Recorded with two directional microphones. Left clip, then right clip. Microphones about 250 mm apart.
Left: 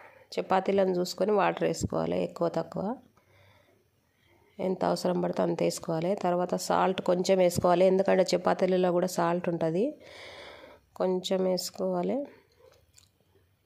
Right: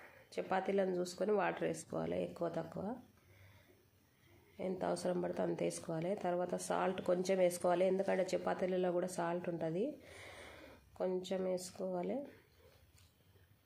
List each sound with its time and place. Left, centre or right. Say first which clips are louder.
0.3 s a woman's voice: left 10 dB; left
4.6 s a woman's voice: left 10 dB; left